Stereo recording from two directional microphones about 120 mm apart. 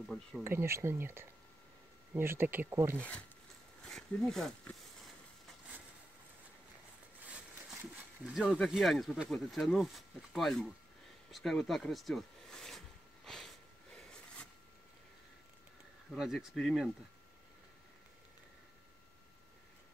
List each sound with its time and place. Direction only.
0.4 s speech: 20° right (ahead or behind)
3.8 s speech: 5° left (ahead or behind)
7.2 s a sound: 10° right (ahead or behind)
8.6 s speech: centre (ahead or behind)
11.3 s a sound: centre (ahead or behind)
16.2 s speech: 5° right (ahead or behind)